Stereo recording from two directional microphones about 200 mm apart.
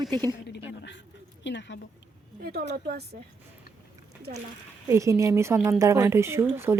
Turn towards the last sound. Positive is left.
turn(degrees=-10)  # may be behind; listen again after turning